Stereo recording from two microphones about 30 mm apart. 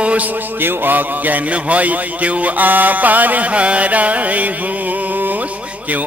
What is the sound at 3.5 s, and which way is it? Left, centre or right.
Music, right.